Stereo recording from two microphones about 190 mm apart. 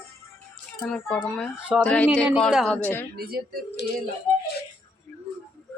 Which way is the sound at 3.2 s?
55° right (ahead or behind).